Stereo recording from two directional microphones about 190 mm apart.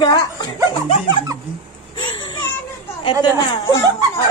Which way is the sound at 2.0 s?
25° left (ahead or behind).